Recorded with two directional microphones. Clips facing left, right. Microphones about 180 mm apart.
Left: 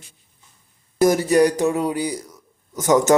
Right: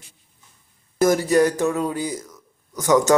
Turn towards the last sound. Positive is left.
turn(degrees=20)  # may be behind; listen again after turning